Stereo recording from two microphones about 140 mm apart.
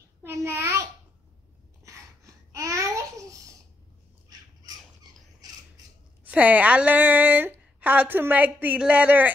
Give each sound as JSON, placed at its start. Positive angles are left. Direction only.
{"t": 0.2, "sound": "a sound", "side_deg": -20}
{"t": 1.9, "sound": "babbling", "side_deg": -25}
{"t": 6.2, "sound": "speech", "side_deg": -10}